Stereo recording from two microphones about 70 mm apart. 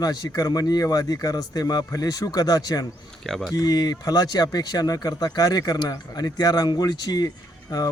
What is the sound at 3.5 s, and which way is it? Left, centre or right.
Speech, left.